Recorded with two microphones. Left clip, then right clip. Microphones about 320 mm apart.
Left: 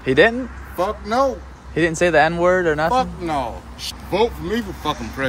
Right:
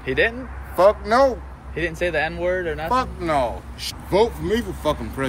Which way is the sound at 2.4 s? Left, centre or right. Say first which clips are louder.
Left 6 dB; left.